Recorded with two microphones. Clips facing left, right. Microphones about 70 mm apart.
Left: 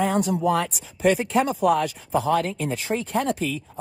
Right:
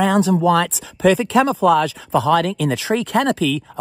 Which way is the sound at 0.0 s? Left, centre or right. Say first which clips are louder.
Right 6 dB; right.